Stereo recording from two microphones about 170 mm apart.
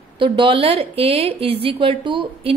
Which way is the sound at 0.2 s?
30° right (ahead or behind).